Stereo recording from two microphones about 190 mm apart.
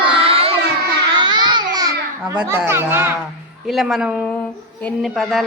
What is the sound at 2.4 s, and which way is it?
Speech, 10° right (ahead or behind).